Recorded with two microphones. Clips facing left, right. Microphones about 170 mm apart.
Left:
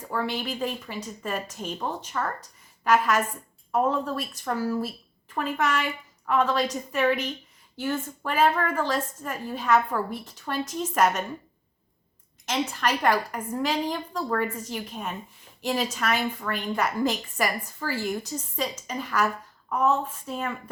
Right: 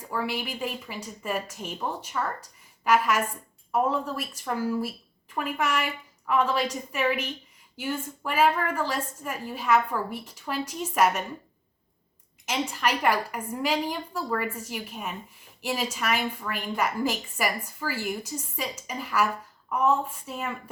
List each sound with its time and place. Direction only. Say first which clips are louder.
0.1 s a woman's voice: left 1 dB; 10° right (ahead or behind)
12.5 s a woman's voice: left 1 dB; 10° right (ahead or behind)